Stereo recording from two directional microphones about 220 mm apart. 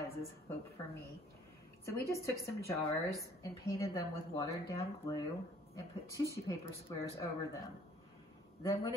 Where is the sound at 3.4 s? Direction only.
15° left (ahead or behind).